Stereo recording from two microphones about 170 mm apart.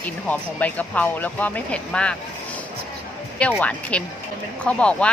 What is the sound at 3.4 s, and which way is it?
A woman's voice, 5° left (ahead or behind).